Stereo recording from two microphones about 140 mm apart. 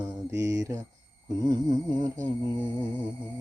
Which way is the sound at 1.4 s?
30° right (ahead or behind).